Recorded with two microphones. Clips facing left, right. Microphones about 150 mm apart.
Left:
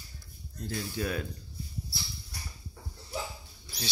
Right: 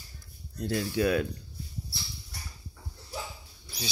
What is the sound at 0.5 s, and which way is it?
Speech, 75° right (ahead or behind).